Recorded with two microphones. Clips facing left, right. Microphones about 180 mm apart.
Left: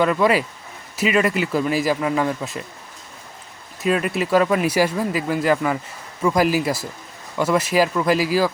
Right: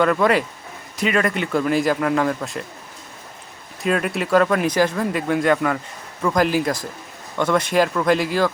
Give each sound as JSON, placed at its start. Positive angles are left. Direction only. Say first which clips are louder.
{"t": 0.0, "sound": "speech", "louder": "even", "side_deg": 0}
{"t": 3.8, "sound": "speech", "louder": "left 1 dB", "side_deg": 0}